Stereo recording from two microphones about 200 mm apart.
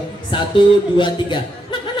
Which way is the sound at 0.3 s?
25° left (ahead or behind).